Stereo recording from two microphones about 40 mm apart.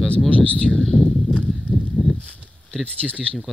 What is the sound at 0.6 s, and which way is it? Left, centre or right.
Speech, centre.